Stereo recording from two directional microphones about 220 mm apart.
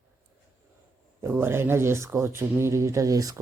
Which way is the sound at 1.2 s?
10° right (ahead or behind).